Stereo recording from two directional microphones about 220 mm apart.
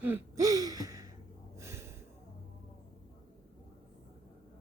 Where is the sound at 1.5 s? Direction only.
10° right (ahead or behind).